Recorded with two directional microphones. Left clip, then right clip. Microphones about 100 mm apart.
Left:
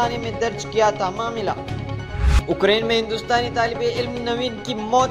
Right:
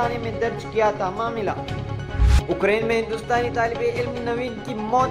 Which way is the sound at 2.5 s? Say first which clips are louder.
Left 2 dB; 55° left (ahead or behind).